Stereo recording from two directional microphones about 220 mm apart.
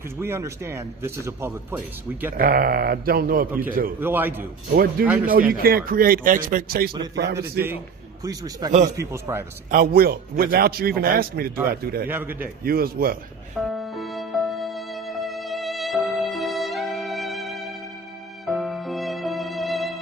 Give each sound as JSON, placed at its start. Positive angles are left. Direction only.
{"t": 0.2, "sound": "a man's voice", "side_deg": -10}
{"t": 2.3, "sound": "speech", "side_deg": -40}
{"t": 3.5, "sound": "a man's voice", "side_deg": -10}
{"t": 4.7, "sound": "a man's voice", "side_deg": -45}
{"t": 5.0, "sound": "speech", "side_deg": -5}
{"t": 5.3, "sound": "speech", "side_deg": -40}
{"t": 8.2, "sound": "a man's voice", "side_deg": -15}
{"t": 9.7, "sound": "a man's voice", "side_deg": -45}
{"t": 12.0, "sound": "a man's voice", "side_deg": -10}
{"t": 12.6, "sound": "a man's voice", "side_deg": -45}
{"t": 13.6, "sound": "music", "side_deg": 0}